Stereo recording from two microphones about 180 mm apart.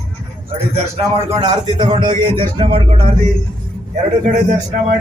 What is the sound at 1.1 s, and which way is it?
A man's voice, 35° right (ahead or behind).